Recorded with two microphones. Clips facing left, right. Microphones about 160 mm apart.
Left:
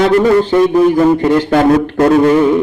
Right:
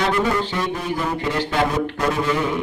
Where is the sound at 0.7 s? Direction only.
55° left (ahead or behind).